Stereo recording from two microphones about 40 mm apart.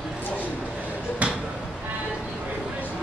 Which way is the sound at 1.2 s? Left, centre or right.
Right.